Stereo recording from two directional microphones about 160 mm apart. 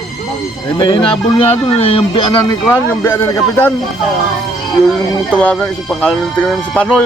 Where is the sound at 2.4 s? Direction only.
15° left (ahead or behind).